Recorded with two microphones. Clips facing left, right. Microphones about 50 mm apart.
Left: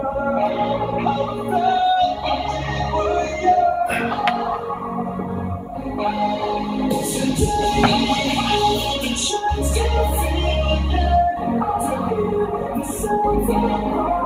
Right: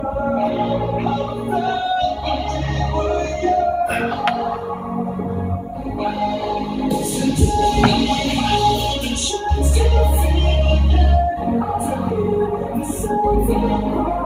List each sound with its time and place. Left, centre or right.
0.3 s music: centre
7.6 s music: centre
13.1 s music: centre